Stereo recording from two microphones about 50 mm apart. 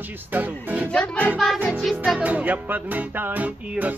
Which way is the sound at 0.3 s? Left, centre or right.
Right.